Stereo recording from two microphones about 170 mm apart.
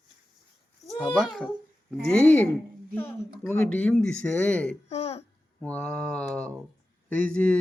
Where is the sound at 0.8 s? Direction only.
Centre (ahead or behind).